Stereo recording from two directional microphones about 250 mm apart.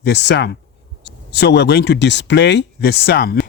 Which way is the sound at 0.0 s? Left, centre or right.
Left.